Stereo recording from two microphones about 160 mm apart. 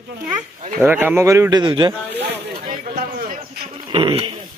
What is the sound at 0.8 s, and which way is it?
Speech, 10° right (ahead or behind).